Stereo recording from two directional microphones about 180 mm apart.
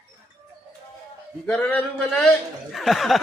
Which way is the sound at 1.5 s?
5° left (ahead or behind).